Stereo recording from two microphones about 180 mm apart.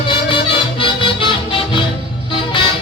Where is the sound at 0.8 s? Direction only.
30° left (ahead or behind).